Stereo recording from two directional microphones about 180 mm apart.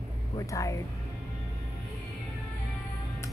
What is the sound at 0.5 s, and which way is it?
Speech, 20° left (ahead or behind).